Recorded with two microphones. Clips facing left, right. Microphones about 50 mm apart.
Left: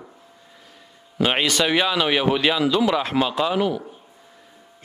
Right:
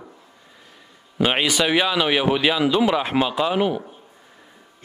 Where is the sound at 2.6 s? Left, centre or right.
Centre.